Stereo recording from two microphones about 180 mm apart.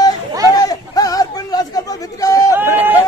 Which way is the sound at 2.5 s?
10° right (ahead or behind).